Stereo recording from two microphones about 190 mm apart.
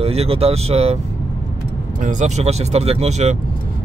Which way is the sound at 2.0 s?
40° right (ahead or behind).